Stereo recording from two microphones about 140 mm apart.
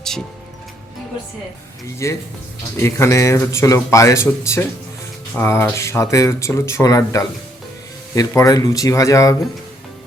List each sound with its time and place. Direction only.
2.0 s speech: 20° left (ahead or behind)